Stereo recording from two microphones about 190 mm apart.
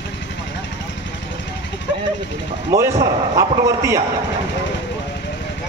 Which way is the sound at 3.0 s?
15° right (ahead or behind).